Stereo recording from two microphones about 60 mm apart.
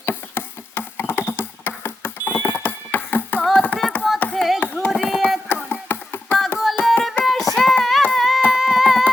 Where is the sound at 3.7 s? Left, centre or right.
Left.